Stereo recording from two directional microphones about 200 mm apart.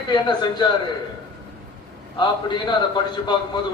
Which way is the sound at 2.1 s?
25° left (ahead or behind).